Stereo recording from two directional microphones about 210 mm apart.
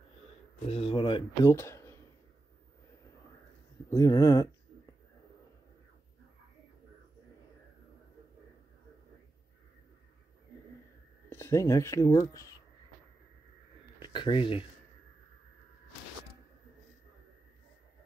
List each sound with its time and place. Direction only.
0.7 s speech: 25° left (ahead or behind)
1.5 s a sound: 15° left (ahead or behind)
3.9 s speech: 15° left (ahead or behind)
11.2 s speech: 10° left (ahead or behind)
14.0 s speech: 25° left (ahead or behind)